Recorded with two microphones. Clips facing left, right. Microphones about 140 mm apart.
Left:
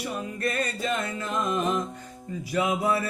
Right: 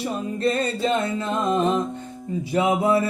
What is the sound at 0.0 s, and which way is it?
Music, 25° right (ahead or behind).